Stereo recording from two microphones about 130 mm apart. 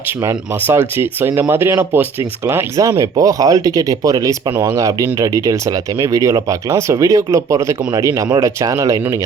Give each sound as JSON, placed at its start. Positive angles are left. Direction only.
{"t": 0.2, "sound": "speech", "side_deg": -20}